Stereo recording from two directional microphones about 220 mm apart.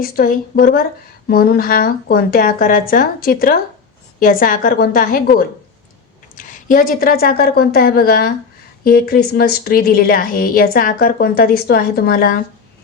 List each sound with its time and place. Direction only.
0.0 s a woman's voice: 40° left (ahead or behind)